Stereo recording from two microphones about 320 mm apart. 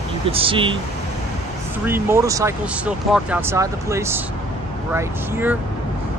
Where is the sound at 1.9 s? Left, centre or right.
Centre.